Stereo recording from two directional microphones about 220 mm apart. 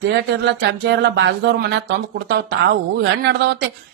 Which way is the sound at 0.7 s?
50° right (ahead or behind).